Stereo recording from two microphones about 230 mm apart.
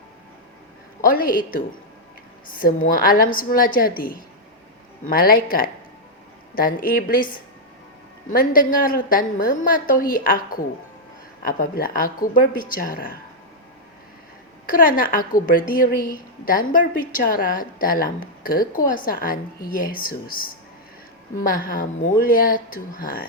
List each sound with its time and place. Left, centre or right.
1.0 s a woman's voice: left
8.3 s a woman's voice: left
14.7 s a woman's voice: left
21.4 s a woman's voice: left